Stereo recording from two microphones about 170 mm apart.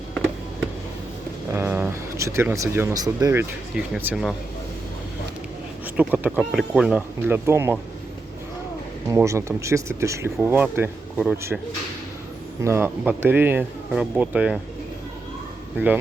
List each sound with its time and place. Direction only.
1.5 s speech: 10° right (ahead or behind)
3.9 s speech: 5° right (ahead or behind)
5.8 s speech: 10° right (ahead or behind)
9.0 s speech: 15° right (ahead or behind)
12.6 s speech: 15° right (ahead or behind)